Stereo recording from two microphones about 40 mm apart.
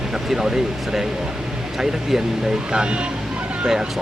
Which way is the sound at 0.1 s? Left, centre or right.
Centre.